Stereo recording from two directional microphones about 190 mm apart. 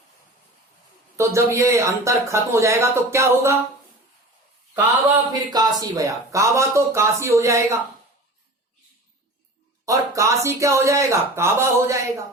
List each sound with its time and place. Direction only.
1.1 s speech: 15° right (ahead or behind)
4.7 s speech: 20° right (ahead or behind)
9.8 s speech: 15° right (ahead or behind)